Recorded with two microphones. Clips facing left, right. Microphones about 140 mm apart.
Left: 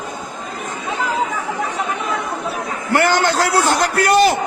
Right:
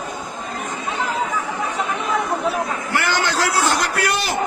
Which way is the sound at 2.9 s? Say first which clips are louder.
Left 7 dB; 50° left (ahead or behind).